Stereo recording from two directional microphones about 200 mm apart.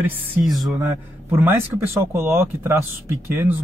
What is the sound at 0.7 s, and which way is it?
Speech, 15° right (ahead or behind).